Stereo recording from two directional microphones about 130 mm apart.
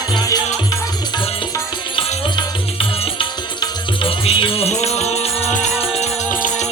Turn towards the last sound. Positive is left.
turn(degrees=75)  # may be behind; listen again after turning